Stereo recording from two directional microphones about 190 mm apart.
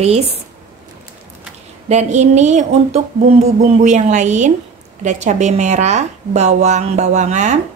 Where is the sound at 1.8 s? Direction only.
40° right (ahead or behind).